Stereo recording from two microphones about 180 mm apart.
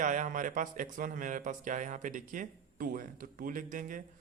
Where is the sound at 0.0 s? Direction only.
45° right (ahead or behind).